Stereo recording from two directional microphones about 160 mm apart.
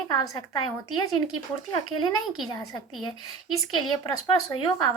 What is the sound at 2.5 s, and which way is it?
A woman's voice, 25° left (ahead or behind).